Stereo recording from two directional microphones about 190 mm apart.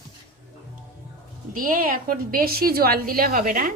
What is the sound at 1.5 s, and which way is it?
A woman's voice, 45° right (ahead or behind).